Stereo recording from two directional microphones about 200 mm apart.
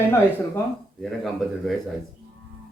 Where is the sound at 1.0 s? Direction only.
Centre (ahead or behind).